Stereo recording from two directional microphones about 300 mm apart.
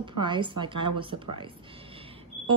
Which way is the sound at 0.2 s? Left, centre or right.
Centre.